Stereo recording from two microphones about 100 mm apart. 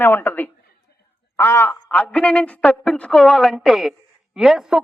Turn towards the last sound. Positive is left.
turn(degrees=-5)  # may be behind; listen again after turning